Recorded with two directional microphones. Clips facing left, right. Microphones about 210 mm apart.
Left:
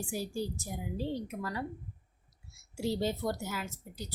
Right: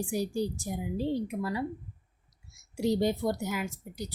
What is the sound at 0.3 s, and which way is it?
A woman's voice, 15° right (ahead or behind).